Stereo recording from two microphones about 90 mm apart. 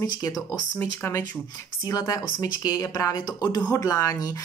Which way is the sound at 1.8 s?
45° left (ahead or behind).